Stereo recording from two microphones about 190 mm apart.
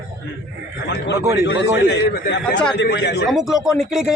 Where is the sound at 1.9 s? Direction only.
60° left (ahead or behind).